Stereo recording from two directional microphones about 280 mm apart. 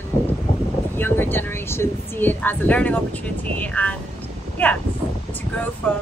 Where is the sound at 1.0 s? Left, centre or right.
Centre.